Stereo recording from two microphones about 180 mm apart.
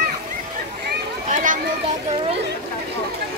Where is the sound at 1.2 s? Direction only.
45° right (ahead or behind).